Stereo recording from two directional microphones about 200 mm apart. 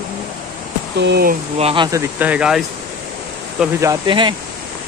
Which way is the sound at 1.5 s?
30° right (ahead or behind).